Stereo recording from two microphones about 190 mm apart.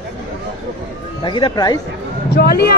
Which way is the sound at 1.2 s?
25° left (ahead or behind).